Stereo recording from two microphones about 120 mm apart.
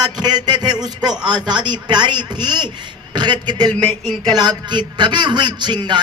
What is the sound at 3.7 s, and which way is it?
Speech, 10° left (ahead or behind).